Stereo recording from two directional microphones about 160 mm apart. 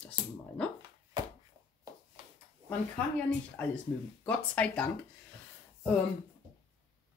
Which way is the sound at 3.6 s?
10° left (ahead or behind).